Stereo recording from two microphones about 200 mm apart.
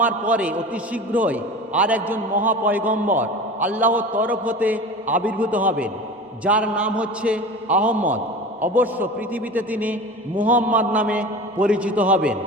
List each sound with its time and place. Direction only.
0.0 s a man's voice: 5° right (ahead or behind)